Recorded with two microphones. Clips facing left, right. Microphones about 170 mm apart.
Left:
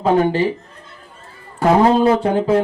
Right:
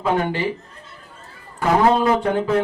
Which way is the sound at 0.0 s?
35° left (ahead or behind).